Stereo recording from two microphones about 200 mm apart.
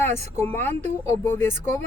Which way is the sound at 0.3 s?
10° left (ahead or behind).